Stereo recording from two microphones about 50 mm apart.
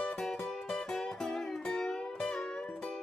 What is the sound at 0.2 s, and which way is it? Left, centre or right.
Music, centre.